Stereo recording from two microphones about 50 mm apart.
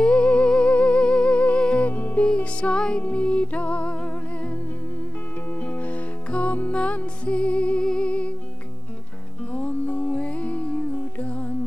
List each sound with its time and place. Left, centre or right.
0.0 s music: left
1.9 s music: left
5.6 s music: left
7.8 s music: centre
8.1 s music: left
9.5 s music: left
10.9 s music: left
11.2 s music: left